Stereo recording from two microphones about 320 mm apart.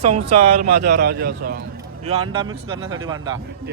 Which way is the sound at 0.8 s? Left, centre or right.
Right.